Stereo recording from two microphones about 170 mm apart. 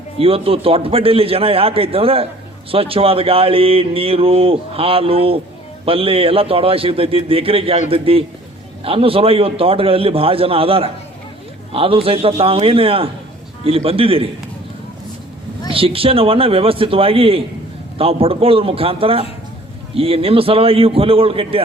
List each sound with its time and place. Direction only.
0.2 s speech: 35° right (ahead or behind)
15.7 s speech: 35° right (ahead or behind)